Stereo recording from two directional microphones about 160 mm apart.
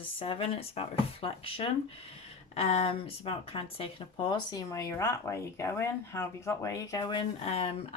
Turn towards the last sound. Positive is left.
turn(degrees=35)  # may be behind; listen again after turning